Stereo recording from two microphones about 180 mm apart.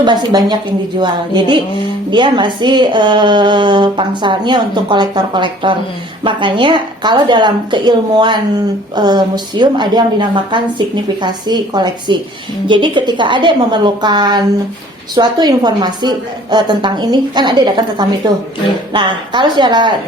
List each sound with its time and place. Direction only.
0.0 s a woman's voice: 25° right (ahead or behind)
18.9 s a woman's voice: 25° right (ahead or behind)